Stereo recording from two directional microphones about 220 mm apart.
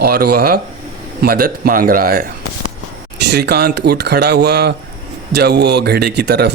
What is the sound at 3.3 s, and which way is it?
Speech, 45° right (ahead or behind).